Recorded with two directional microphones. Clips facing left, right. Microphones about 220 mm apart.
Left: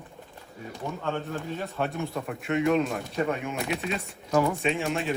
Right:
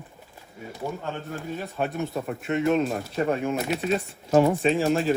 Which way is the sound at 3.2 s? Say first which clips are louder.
Right 4 dB; 35° right (ahead or behind).